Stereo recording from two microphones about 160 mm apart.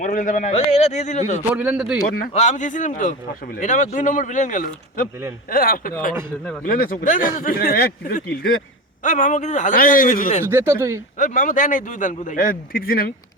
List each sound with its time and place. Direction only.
0.0 s a man's voice: 55° left (ahead or behind)
1.5 s a man's voice: 5° right (ahead or behind)
2.0 s speech: 65° left (ahead or behind)
2.3 s a man's voice: 45° left (ahead or behind); by 5.9 s 65° left (ahead or behind)
6.4 s speech: 10° left (ahead or behind)
6.7 s speech: 60° left (ahead or behind)
9.0 s speech: 50° left (ahead or behind)
10.5 s speech: 15° right (ahead or behind)
11.2 s speech: 55° left (ahead or behind)